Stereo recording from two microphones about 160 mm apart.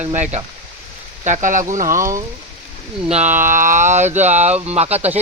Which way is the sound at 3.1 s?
50° right (ahead or behind).